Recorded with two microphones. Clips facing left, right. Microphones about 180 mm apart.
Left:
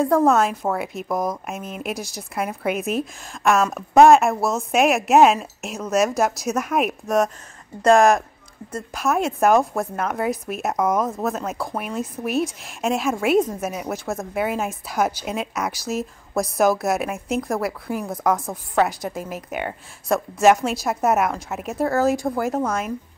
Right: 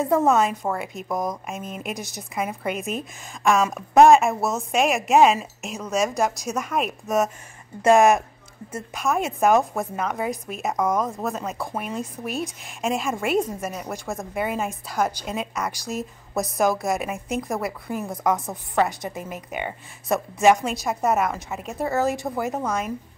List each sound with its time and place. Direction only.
0.0 s a woman's voice: 5° right (ahead or behind)
7.8 s a woman's voice: 5° right (ahead or behind)